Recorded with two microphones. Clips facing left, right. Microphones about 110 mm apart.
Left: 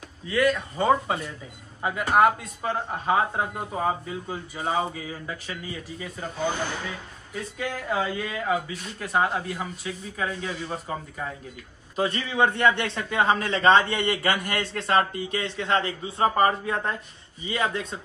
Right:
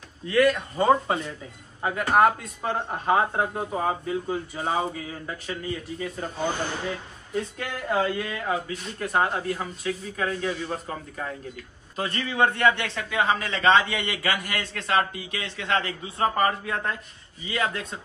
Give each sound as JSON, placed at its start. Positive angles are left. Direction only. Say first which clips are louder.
{"t": 0.3, "sound": "speech", "louder": "right 2 dB", "side_deg": 0}
{"t": 7.3, "sound": "speech", "louder": "right 1 dB", "side_deg": 5}
{"t": 12.0, "sound": "a man's voice", "louder": "left 1 dB", "side_deg": 20}
{"t": 13.2, "sound": "a man's voice", "louder": "left 2 dB", "side_deg": 35}